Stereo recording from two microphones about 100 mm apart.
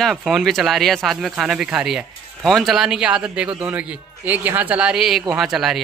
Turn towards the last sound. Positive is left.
turn(degrees=-5)  # may be behind; listen again after turning